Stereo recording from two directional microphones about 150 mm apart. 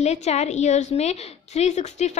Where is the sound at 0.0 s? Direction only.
45° left (ahead or behind).